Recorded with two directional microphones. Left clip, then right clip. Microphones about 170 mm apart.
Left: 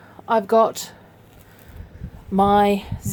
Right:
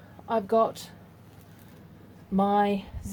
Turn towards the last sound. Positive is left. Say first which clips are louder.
# left 8 dB
turn(degrees=60)  # may be behind; listen again after turning